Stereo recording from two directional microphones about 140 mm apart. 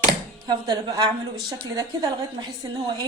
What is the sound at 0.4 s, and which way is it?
A woman's voice, 30° right (ahead or behind).